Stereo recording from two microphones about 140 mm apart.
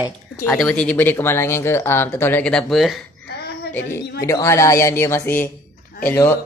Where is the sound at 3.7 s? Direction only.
20° left (ahead or behind).